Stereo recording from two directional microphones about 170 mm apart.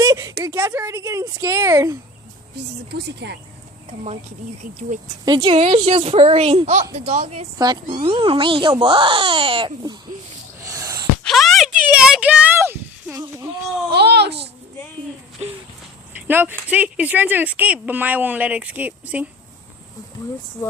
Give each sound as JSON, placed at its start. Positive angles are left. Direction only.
{"t": 0.0, "sound": "a sound", "side_deg": -20}
{"t": 0.4, "sound": "speech", "side_deg": -15}
{"t": 2.9, "sound": "speech", "side_deg": -80}
{"t": 5.2, "sound": "speech", "side_deg": -30}
{"t": 10.6, "sound": "a sound", "side_deg": -20}
{"t": 11.2, "sound": "speech", "side_deg": 0}
{"t": 13.9, "sound": "a child's voice", "side_deg": -75}
{"t": 16.2, "sound": "speech", "side_deg": -10}